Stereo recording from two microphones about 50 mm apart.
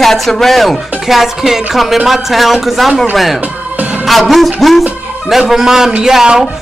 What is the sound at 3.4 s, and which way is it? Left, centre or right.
Music, right.